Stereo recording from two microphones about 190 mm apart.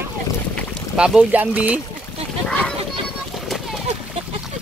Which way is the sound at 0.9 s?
5° right (ahead or behind).